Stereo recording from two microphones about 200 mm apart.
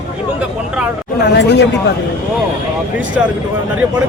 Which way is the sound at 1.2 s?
60° left (ahead or behind).